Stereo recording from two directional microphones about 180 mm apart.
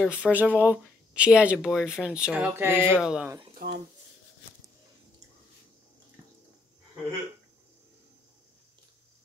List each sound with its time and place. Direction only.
0.0 s speech: 5° right (ahead or behind)
3.5 s speech: 60° right (ahead or behind)